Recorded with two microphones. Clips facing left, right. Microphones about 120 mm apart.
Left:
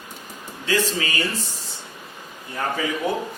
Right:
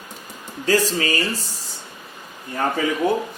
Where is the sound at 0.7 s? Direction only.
40° right (ahead or behind).